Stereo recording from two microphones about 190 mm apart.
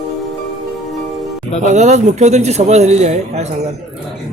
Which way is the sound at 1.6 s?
40° right (ahead or behind).